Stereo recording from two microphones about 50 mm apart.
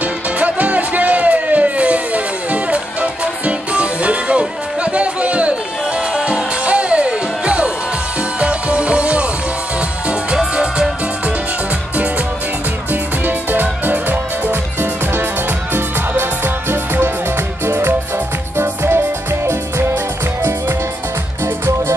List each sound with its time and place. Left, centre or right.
0.0 s music: right
12.9 s music: right
17.6 s music: right